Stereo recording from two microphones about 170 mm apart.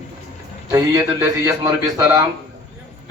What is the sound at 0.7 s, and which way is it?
A man's voice, 20° right (ahead or behind).